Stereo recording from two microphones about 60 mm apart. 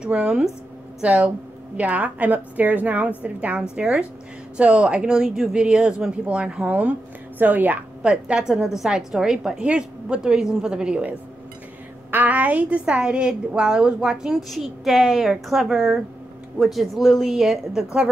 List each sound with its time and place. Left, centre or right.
0.0 s a woman's voice: centre
8.0 s a woman's voice: centre